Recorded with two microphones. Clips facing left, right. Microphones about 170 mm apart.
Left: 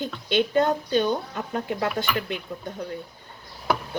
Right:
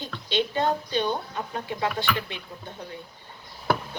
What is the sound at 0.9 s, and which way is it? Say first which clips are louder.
Speech: left 4 dB; 45° left (ahead or behind).